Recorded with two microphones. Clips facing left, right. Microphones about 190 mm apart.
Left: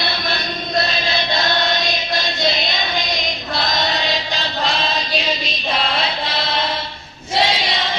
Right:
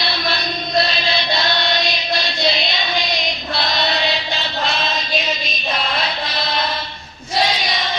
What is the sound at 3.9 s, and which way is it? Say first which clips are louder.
Chant: right 1 dB; 40° left (ahead or behind).